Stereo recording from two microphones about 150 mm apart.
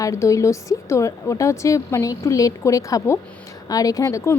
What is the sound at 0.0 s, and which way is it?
A woman's voice, 20° left (ahead or behind).